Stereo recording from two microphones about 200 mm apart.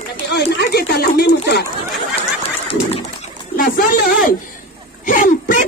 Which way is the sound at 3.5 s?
45° left (ahead or behind).